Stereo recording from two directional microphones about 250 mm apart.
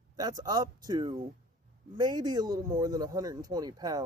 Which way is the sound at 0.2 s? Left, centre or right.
Centre.